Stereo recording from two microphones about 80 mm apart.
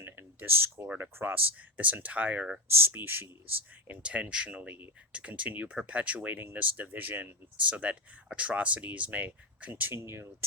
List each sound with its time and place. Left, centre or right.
0.0 s a sound: right
0.9 s speech: right
4.0 s speech: centre
9.9 s speech: right